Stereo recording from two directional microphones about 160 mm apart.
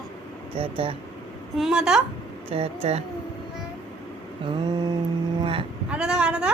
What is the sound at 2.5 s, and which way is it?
Speech, 40° right (ahead or behind).